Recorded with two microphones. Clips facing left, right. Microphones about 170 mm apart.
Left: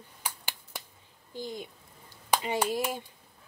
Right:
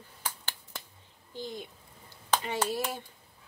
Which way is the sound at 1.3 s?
10° left (ahead or behind).